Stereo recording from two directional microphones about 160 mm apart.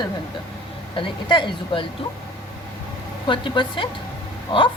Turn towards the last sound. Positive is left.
turn(degrees=30)  # may be behind; listen again after turning